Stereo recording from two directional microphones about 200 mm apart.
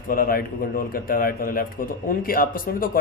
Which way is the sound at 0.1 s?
45° left (ahead or behind).